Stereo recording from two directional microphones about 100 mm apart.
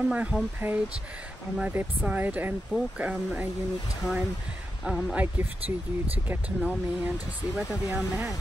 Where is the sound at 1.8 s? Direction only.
15° right (ahead or behind).